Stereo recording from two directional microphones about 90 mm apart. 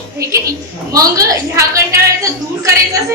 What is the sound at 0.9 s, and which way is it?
A woman's voice, 40° right (ahead or behind).